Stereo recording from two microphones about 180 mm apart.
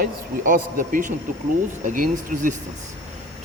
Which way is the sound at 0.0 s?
50° right (ahead or behind).